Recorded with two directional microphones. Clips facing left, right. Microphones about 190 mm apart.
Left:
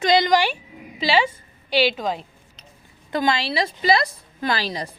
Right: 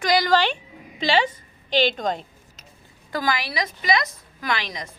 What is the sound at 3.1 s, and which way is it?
A woman's voice, 25° left (ahead or behind).